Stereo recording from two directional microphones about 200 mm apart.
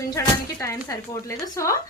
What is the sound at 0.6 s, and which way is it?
Speech, 15° left (ahead or behind).